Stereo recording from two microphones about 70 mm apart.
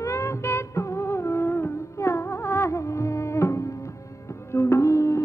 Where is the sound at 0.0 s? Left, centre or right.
Left.